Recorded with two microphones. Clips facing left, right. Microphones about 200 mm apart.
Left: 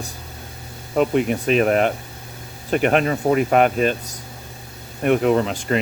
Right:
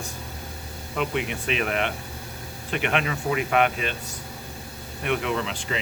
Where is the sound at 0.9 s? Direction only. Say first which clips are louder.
Left 9 dB; 40° left (ahead or behind).